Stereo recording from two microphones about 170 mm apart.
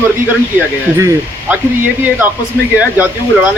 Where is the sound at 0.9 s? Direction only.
15° right (ahead or behind).